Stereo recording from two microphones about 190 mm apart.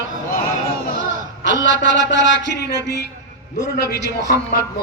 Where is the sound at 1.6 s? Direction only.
70° left (ahead or behind).